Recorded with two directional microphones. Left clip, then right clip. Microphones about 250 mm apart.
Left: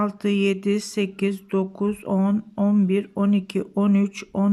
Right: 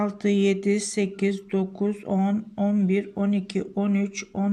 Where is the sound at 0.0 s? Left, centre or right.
Centre.